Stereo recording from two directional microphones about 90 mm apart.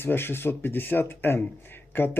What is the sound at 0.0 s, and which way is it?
Speech, 25° left (ahead or behind).